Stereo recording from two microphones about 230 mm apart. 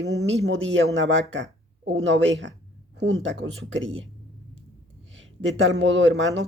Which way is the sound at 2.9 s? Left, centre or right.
Right.